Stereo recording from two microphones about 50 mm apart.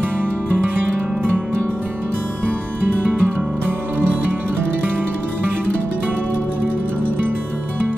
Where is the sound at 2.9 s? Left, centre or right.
Right.